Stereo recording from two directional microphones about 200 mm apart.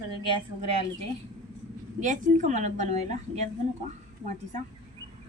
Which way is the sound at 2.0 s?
40° right (ahead or behind).